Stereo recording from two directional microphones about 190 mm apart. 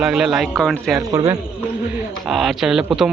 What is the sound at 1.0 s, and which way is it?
Speech, 20° right (ahead or behind).